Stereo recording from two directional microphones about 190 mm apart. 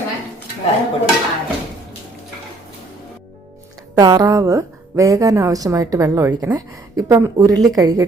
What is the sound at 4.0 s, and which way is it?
A woman's voice, 20° right (ahead or behind).